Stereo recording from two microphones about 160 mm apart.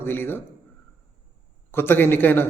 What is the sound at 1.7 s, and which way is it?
Speech, 15° left (ahead or behind).